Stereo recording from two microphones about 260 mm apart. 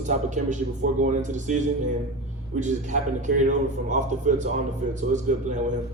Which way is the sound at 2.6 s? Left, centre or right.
Right.